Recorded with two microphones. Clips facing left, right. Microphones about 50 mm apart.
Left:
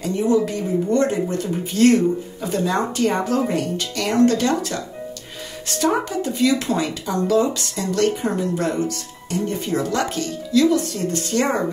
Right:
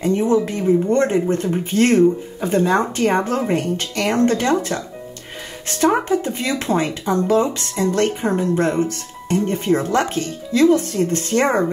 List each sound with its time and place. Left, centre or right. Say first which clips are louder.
0.0 s speech: right 2 dB; right